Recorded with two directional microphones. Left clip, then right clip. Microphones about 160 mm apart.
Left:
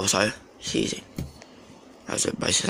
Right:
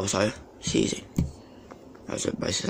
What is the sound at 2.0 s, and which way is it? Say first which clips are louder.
Speech: left 3 dB; 5° right (ahead or behind).